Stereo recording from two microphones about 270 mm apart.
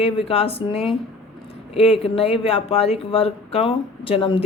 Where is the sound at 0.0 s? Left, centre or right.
Left.